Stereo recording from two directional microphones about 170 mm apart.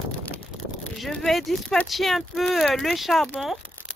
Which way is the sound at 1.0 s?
5° left (ahead or behind).